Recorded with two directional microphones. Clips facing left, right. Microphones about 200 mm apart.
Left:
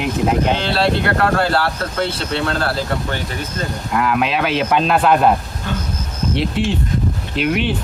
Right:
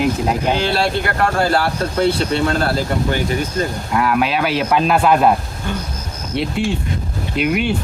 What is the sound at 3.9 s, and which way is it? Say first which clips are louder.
Speech: even; centre (ahead or behind).